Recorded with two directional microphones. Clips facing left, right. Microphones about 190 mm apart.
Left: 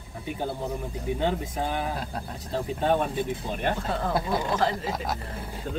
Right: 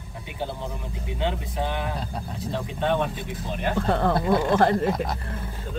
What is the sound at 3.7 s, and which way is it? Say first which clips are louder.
Speech: right 5 dB; 65° right (ahead or behind).